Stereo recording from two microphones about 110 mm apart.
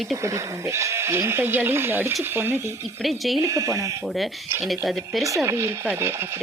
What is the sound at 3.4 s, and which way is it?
Speech, 30° right (ahead or behind).